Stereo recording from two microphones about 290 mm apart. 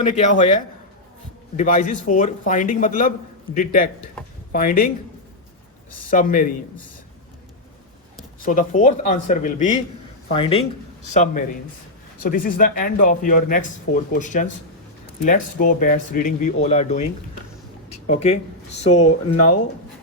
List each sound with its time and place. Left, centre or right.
0.0 s speech: left
6.1 s speech: left
8.4 s speech: left
17.8 s a sound: left
18.8 s speech: left